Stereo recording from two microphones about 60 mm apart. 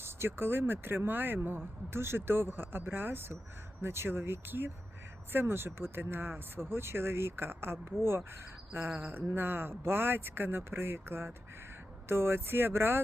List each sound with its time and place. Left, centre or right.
0.0 s speech: right